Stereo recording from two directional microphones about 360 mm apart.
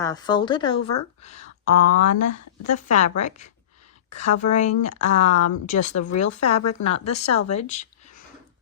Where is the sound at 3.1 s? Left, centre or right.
Centre.